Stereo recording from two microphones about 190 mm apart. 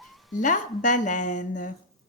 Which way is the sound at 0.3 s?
40° left (ahead or behind).